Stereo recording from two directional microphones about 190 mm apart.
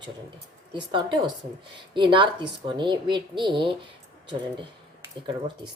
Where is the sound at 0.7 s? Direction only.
25° right (ahead or behind).